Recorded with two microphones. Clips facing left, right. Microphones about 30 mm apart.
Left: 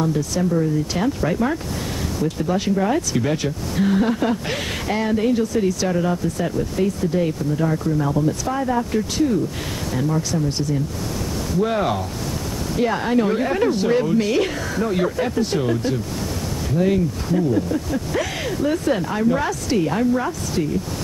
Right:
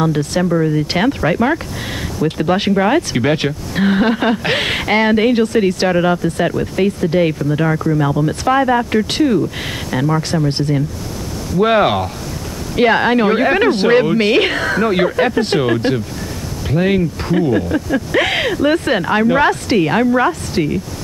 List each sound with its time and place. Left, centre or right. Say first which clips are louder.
0.0 s speech: right 5 dB; right